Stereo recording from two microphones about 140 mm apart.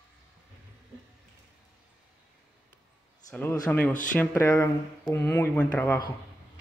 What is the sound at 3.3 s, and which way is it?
Speech, 10° left (ahead or behind).